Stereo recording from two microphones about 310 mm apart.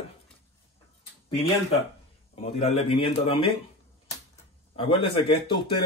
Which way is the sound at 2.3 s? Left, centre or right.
Centre.